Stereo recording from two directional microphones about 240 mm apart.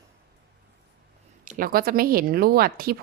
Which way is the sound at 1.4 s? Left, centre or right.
Right.